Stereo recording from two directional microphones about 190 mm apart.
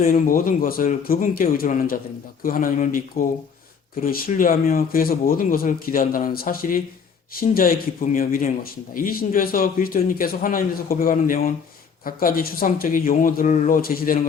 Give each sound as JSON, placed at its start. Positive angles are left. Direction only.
{"t": 0.0, "sound": "speech", "side_deg": 45}